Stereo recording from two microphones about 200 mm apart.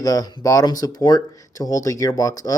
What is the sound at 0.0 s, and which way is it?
Speech, 20° left (ahead or behind).